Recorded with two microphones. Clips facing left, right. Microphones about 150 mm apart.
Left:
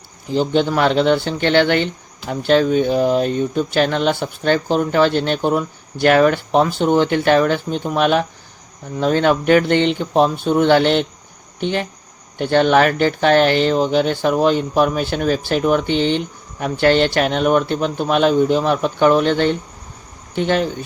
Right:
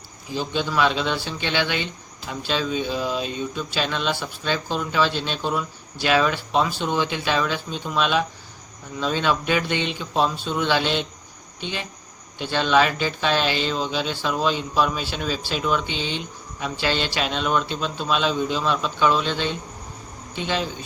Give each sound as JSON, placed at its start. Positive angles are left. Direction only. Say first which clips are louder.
{"t": 0.3, "sound": "speech", "louder": "left 7 dB", "side_deg": 55}